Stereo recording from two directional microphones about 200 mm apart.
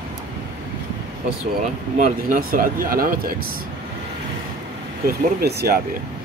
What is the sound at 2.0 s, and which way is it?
Speech, 45° right (ahead or behind).